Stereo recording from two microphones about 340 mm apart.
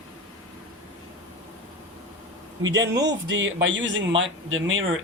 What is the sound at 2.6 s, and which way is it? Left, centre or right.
Speech, right.